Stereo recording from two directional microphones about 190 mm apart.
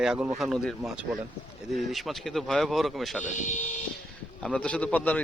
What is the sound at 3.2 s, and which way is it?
Speech, 40° left (ahead or behind).